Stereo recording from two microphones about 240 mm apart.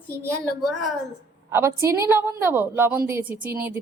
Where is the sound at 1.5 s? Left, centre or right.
Centre.